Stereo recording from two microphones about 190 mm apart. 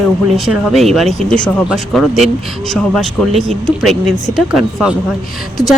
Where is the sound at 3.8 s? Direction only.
Centre (ahead or behind).